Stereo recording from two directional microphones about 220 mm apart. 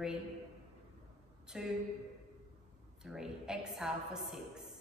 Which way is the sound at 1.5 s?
5° right (ahead or behind).